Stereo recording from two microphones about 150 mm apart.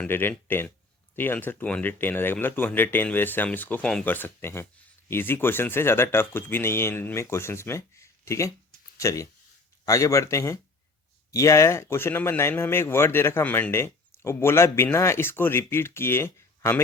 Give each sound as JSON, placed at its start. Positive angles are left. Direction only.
{"t": 0.0, "sound": "speech", "side_deg": 15}